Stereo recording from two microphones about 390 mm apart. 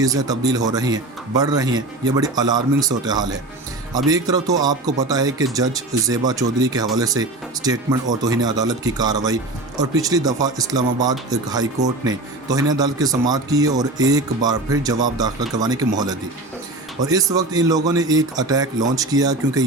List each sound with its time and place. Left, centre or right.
0.0 s a man's voice: centre
17.0 s a man's voice: centre